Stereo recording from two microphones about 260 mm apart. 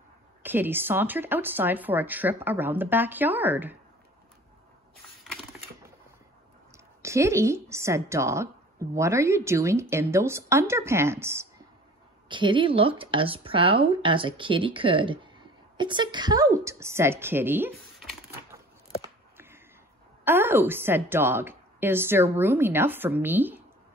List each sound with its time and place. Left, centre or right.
0.4 s a woman's voice: centre
5.2 s typing: centre
7.0 s a woman's voice: centre
20.2 s a woman's voice: centre